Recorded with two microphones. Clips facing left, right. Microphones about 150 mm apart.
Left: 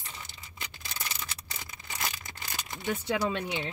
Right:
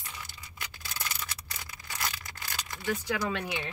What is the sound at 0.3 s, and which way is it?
Tearing, 20° left (ahead or behind).